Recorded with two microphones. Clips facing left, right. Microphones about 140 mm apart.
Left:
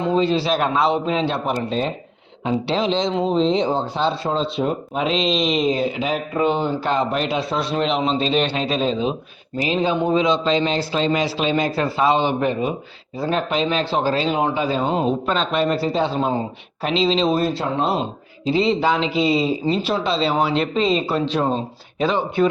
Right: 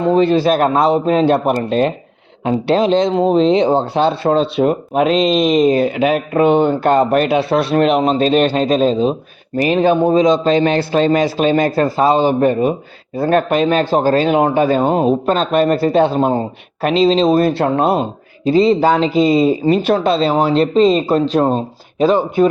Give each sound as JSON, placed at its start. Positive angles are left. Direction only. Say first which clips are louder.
{"t": 0.0, "sound": "speech", "louder": "right 6 dB", "side_deg": -55}
{"t": 9.6, "sound": "speech", "louder": "right 7 dB", "side_deg": -55}
{"t": 10.0, "sound": "speech", "louder": "right 6 dB", "side_deg": -40}
{"t": 17.4, "sound": "speech", "louder": "right 7 dB", "side_deg": -60}
{"t": 18.4, "sound": "speech", "louder": "right 7 dB", "side_deg": -40}